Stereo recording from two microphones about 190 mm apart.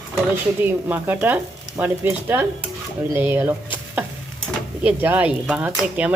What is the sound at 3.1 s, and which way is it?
Speech, 10° right (ahead or behind).